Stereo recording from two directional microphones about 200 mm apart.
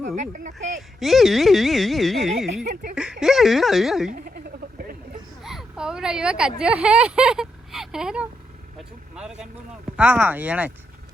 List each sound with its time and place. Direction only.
0.2 s speech: 40° right (ahead or behind)
0.8 s speech: centre (ahead or behind)
5.4 s a sound: centre (ahead or behind)
6.6 s speech: 5° right (ahead or behind)